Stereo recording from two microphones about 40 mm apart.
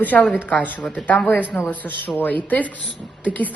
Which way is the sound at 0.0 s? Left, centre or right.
Left.